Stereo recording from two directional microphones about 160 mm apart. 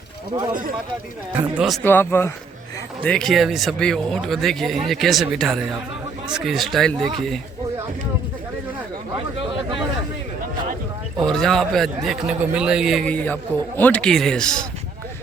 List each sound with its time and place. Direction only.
1.4 s speech: 5° right (ahead or behind)
1.8 s speech: 15° left (ahead or behind)
9.1 s a sound: 30° right (ahead or behind)
11.2 s speech: centre (ahead or behind)